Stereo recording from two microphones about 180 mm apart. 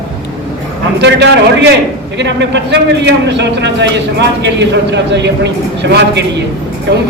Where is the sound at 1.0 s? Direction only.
75° right (ahead or behind).